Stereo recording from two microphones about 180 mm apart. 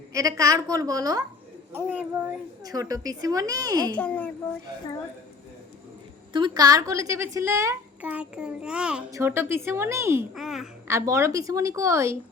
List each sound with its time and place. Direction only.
0.1 s speech: 20° right (ahead or behind)
1.7 s a woman's voice: 10° right (ahead or behind)
2.6 s speech: 20° right (ahead or behind)
3.9 s a child's voice: 10° left (ahead or behind)
6.3 s a woman's voice: 25° right (ahead or behind)
10.3 s a child's voice: centre (ahead or behind)
10.8 s a woman's voice: 15° right (ahead or behind)